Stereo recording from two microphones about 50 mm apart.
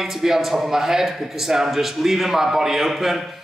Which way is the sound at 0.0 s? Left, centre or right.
Centre.